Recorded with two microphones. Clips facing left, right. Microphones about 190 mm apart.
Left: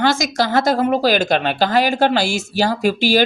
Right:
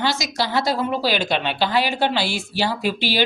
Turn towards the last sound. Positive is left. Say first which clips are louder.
# left 6 dB
turn(degrees=45)  # may be behind; listen again after turning